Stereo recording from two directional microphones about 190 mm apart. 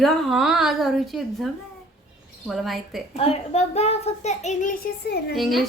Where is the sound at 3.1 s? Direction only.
35° left (ahead or behind); by 5.4 s 50° left (ahead or behind).